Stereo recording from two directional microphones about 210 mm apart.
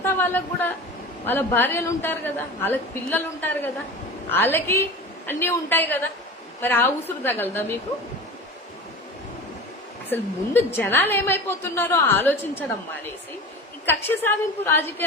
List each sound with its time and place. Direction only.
0.0 s a woman's voice: 10° left (ahead or behind)
10.1 s a woman's voice: 10° left (ahead or behind)
13.8 s a woman's voice: 10° left (ahead or behind)